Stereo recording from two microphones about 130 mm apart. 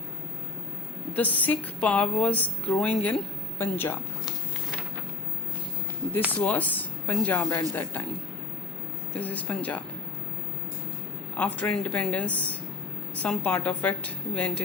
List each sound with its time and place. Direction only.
1.1 s a woman's voice: 10° left (ahead or behind)
6.4 s a woman's voice: 10° left (ahead or behind)
9.1 s a woman's voice: 10° left (ahead or behind)
11.3 s a woman's voice: 10° left (ahead or behind)